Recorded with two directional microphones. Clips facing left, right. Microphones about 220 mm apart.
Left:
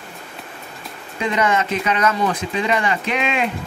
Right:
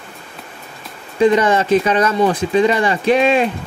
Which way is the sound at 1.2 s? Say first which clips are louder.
Right 7 dB; 30° right (ahead or behind).